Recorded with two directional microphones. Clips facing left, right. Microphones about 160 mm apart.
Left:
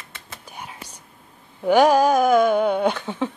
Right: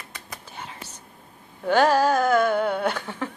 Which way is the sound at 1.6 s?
15° left (ahead or behind).